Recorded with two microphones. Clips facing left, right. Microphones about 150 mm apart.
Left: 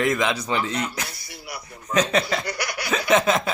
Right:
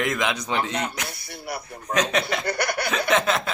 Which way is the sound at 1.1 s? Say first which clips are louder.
Right 4 dB; 55° right (ahead or behind).